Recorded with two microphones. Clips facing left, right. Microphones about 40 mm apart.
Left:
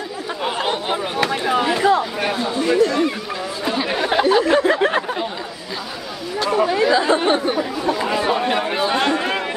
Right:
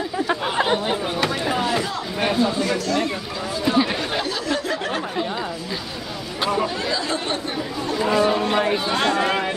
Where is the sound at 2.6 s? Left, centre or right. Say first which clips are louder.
Left 6 dB; left.